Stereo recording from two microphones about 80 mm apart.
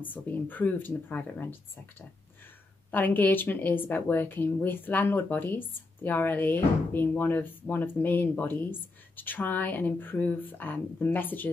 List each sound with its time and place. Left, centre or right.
0.0 s speech: left